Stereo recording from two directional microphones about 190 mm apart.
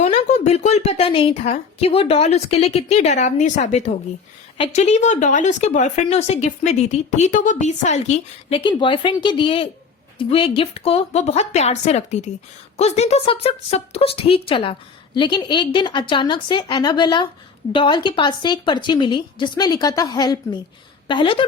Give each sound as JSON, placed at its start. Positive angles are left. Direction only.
{"t": 0.0, "sound": "speech", "side_deg": 35}